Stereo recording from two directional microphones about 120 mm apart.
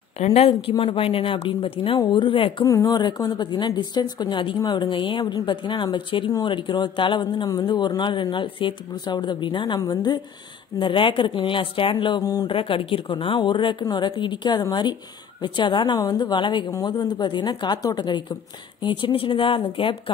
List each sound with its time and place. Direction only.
0.2 s a woman's voice: 60° left (ahead or behind)
2.0 s a woman's voice: 40° left (ahead or behind)
2.6 s a woman's voice: 30° left (ahead or behind)
10.8 s a woman's voice: 45° left (ahead or behind)
12.2 s a woman's voice: 30° left (ahead or behind)
12.4 s a woman's voice: 45° left (ahead or behind)